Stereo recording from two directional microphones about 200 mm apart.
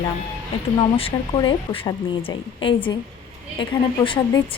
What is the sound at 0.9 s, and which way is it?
A woman's voice, 25° left (ahead or behind).